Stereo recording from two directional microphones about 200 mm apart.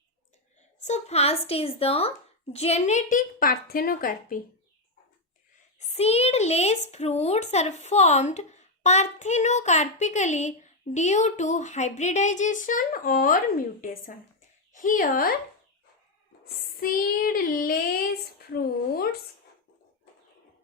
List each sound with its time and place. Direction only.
0.9 s speech: 35° left (ahead or behind)
5.9 s speech: 30° left (ahead or behind)
14.7 s child singing: 40° left (ahead or behind)
16.6 s child singing: 45° left (ahead or behind)